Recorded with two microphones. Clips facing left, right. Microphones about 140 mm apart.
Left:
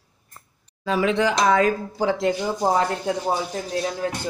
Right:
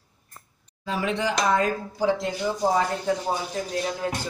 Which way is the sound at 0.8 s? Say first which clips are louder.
Left 5 dB; 90° left.